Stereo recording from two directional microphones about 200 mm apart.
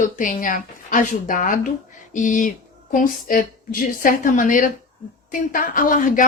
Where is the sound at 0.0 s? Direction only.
40° left (ahead or behind).